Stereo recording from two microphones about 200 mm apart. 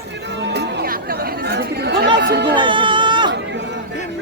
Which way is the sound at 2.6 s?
25° right (ahead or behind).